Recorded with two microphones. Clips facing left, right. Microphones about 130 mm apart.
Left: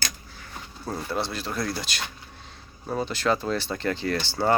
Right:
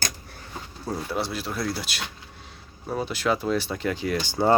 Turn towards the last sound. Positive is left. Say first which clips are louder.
# right 2 dB
turn(degrees=-15)  # may be behind; listen again after turning